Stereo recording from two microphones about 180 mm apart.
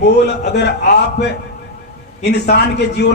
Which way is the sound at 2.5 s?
65° left (ahead or behind).